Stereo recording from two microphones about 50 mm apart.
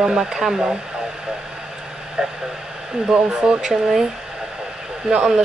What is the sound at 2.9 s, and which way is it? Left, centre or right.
Speech, centre.